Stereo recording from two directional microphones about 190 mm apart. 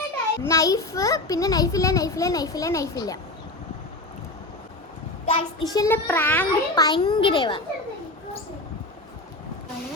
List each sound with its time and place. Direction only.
0.4 s a child's voice: 15° left (ahead or behind)
5.2 s a child's voice: 25° left (ahead or behind); by 6.8 s 10° left (ahead or behind)
6.8 s a child's voice: 20° left (ahead or behind)